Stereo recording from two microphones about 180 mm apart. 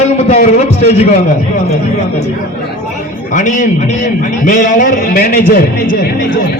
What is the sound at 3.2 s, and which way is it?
A man's voice, 45° left (ahead or behind).